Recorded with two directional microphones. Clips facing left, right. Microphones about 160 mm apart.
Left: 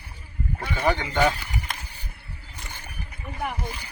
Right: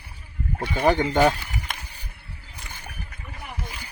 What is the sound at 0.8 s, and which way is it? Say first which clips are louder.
Speech: right 4 dB; 45° right (ahead or behind).